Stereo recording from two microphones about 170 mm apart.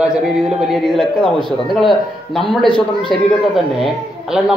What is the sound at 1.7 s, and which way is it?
A man's voice, centre (ahead or behind).